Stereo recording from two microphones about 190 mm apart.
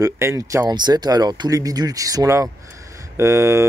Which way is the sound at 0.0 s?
15° right (ahead or behind).